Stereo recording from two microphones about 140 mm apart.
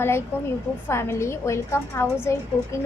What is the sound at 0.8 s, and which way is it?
A woman's voice, 20° left (ahead or behind).